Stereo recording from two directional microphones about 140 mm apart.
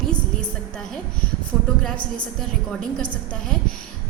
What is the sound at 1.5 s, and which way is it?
Speech, 20° right (ahead or behind).